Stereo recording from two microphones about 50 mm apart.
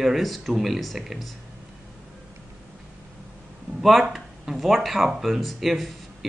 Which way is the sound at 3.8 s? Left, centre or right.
Centre.